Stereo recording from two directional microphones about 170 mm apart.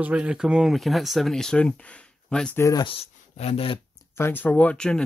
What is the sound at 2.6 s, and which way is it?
Speech, 25° left (ahead or behind).